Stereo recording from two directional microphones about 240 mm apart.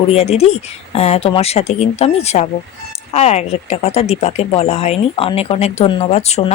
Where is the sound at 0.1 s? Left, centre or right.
Left.